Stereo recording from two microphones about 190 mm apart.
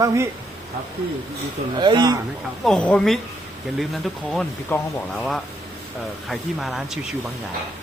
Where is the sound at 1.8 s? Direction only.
25° right (ahead or behind).